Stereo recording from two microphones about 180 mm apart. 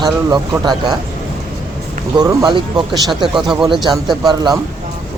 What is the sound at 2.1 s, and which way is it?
Speech, 25° right (ahead or behind).